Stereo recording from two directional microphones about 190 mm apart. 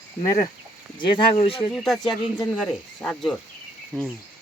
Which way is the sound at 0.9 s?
25° left (ahead or behind).